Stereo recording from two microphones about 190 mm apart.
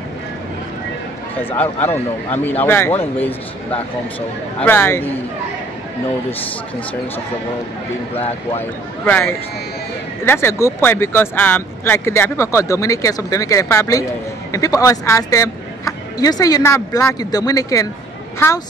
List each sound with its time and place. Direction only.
1.3 s speech: 10° left (ahead or behind)
8.2 s speech: 35° left (ahead or behind)
9.0 s speech: 10° left (ahead or behind)